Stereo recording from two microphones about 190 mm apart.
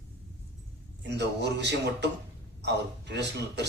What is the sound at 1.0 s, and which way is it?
A man's voice, 65° right (ahead or behind).